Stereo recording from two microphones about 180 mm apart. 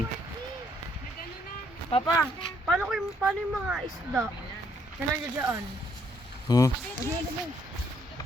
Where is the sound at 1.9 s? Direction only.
35° left (ahead or behind).